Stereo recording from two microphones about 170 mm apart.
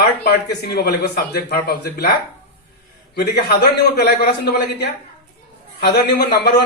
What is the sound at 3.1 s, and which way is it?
Speech, 70° left (ahead or behind).